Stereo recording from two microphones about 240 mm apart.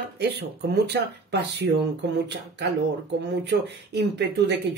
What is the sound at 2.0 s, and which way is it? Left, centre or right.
Speech, right.